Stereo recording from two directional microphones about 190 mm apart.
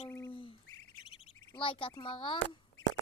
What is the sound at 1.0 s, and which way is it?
Chirp, 30° left (ahead or behind).